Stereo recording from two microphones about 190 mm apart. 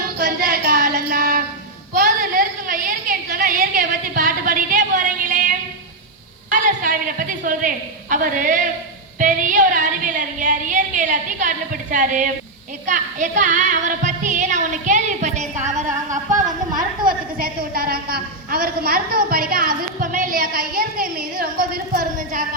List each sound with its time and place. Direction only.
0.2 s child singing: 50° right (ahead or behind)
2.0 s a sound: 45° right (ahead or behind)
6.5 s a woman's voice: 45° right (ahead or behind)
12.8 s music: 40° right (ahead or behind)
16.5 s a sound: 25° right (ahead or behind)
17.3 s a woman's voice: 50° right (ahead or behind)